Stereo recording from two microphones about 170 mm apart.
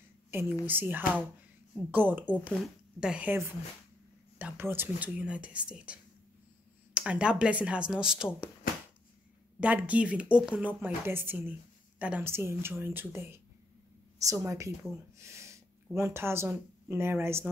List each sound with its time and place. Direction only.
0.3 s a woman's voice: 15° right (ahead or behind)
9.6 s a woman's voice: 10° right (ahead or behind)